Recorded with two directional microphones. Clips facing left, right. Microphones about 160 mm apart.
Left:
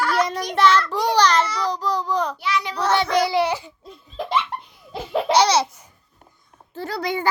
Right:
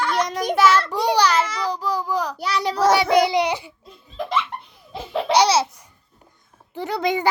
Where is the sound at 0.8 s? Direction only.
15° right (ahead or behind).